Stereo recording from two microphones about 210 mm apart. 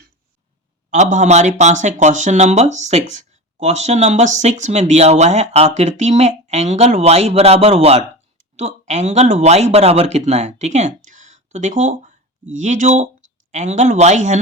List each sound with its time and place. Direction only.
0.9 s speech: 35° right (ahead or behind)